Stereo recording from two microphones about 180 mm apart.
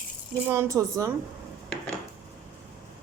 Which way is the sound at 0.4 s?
15° right (ahead or behind).